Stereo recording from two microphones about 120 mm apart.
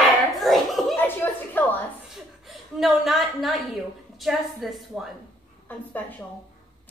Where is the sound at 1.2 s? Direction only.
15° left (ahead or behind).